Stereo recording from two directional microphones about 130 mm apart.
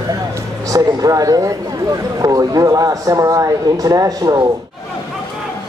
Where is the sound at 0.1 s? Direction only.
25° right (ahead or behind).